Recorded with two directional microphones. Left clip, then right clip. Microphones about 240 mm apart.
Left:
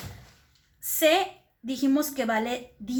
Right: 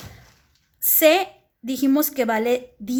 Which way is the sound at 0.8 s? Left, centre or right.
Right.